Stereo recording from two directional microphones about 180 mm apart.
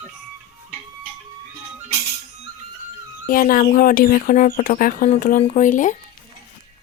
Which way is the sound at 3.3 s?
50° left (ahead or behind).